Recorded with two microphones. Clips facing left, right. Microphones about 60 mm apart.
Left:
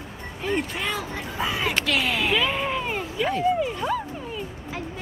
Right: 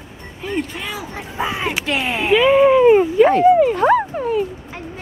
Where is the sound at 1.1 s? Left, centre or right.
Right.